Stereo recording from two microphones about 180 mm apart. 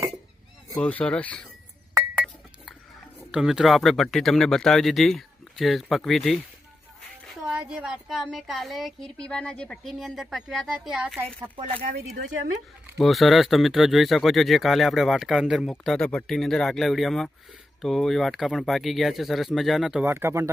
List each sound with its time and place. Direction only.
0.8 s speech: 5° left (ahead or behind)
2.1 s chink: centre (ahead or behind)
3.3 s speech: 5° right (ahead or behind)
11.8 s speech: 55° right (ahead or behind)
13.0 s speech: centre (ahead or behind)